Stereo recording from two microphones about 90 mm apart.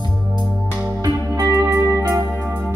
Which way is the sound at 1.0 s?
45° right (ahead or behind).